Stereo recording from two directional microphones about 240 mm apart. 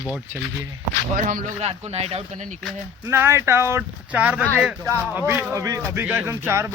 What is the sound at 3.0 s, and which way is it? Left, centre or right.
Speech, centre.